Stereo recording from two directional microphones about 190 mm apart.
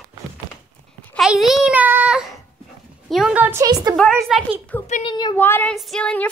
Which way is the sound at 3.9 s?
Centre (ahead or behind).